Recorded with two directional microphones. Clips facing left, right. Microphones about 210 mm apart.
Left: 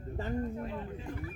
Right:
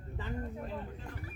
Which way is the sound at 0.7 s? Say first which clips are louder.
Left 2 dB; centre (ahead or behind).